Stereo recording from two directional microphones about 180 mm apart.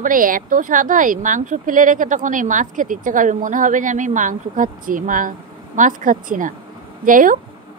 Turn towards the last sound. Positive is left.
turn(degrees=-50)  # may be behind; listen again after turning